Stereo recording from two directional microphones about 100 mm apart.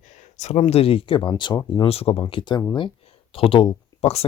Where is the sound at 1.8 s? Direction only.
80° left.